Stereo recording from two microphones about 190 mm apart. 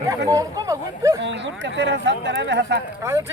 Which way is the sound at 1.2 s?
70° right (ahead or behind).